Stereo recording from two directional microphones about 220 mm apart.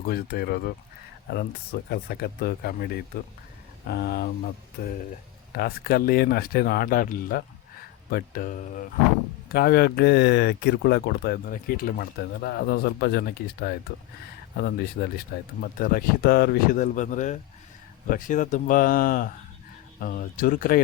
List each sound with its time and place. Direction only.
0.0 s speech: 45° left (ahead or behind)